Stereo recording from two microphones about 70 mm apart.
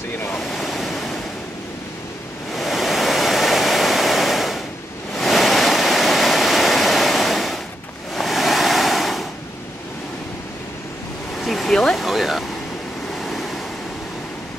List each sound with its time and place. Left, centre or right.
0.4 s waves: centre
2.5 s waterfall: centre
8.1 s waves: centre
11.3 s vehicle: centre
13.2 s waves: centre